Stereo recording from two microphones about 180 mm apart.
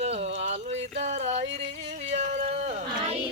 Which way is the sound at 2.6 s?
40° right (ahead or behind).